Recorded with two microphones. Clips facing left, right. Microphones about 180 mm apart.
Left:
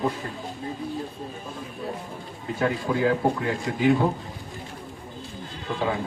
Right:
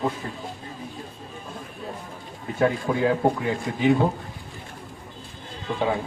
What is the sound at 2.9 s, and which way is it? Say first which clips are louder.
Speech: even; 15° right (ahead or behind).